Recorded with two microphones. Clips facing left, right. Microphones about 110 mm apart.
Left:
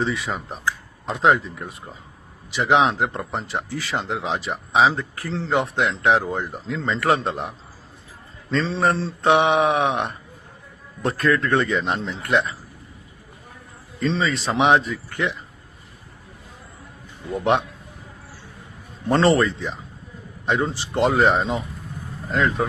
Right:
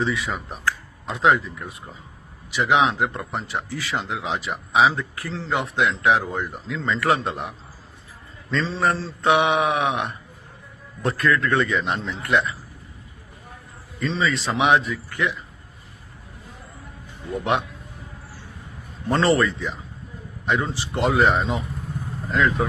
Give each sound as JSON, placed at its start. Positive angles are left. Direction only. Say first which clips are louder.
{"t": 0.0, "sound": "speech", "louder": "even", "side_deg": 35}
{"t": 14.0, "sound": "speech", "louder": "left 1 dB", "side_deg": 30}
{"t": 17.3, "sound": "speech", "louder": "left 3 dB", "side_deg": 30}
{"t": 19.0, "sound": "speech", "louder": "left 2 dB", "side_deg": 35}